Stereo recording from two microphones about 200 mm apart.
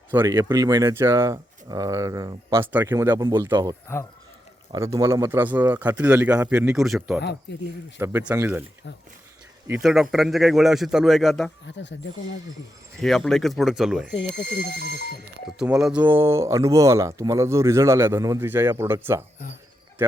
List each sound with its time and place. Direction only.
0.1 s speech: 15° right (ahead or behind)
7.5 s speech: 60° left (ahead or behind)
7.9 s speech: 10° right (ahead or behind)
9.6 s a man's voice: 5° right (ahead or behind)
11.6 s speech: 60° left (ahead or behind)
13.0 s a man's voice: 5° left (ahead or behind)
14.8 s speech: 55° right (ahead or behind)
15.4 s speech: 5° right (ahead or behind)